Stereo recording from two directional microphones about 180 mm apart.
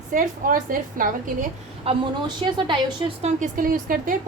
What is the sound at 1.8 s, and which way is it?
A woman's voice, 25° right (ahead or behind).